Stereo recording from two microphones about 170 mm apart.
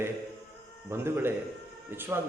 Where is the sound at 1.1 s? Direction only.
15° right (ahead or behind).